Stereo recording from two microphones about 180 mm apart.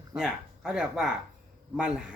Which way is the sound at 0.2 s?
5° right (ahead or behind).